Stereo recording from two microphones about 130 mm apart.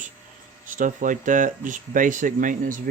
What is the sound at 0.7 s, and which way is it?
Speech, 90° right.